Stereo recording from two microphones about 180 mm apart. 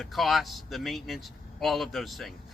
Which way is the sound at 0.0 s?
Centre (ahead or behind).